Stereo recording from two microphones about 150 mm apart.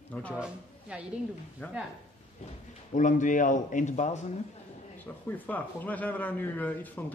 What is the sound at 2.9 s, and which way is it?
A man's voice, 55° left (ahead or behind).